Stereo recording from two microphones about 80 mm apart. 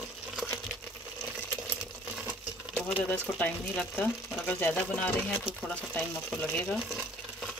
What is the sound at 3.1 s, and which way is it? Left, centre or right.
Speech, left.